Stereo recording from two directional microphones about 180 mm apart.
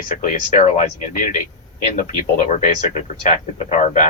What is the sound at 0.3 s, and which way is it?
A man's voice, 45° left (ahead or behind).